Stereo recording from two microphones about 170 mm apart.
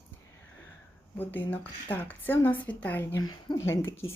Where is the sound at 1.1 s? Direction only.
10° left (ahead or behind).